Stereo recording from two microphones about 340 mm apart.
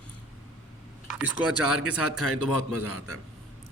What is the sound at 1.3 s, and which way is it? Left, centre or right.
A man's voice, left.